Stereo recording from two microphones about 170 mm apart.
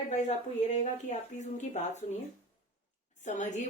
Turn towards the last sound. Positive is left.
turn(degrees=45)  # may be behind; listen again after turning